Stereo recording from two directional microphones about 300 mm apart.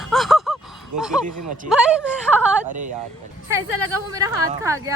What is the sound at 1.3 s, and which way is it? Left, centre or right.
Speech, right.